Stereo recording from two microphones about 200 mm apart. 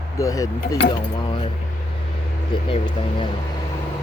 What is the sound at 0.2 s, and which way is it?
Speech, 15° left (ahead or behind).